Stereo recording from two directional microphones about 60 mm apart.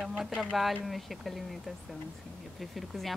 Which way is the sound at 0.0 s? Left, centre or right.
Centre.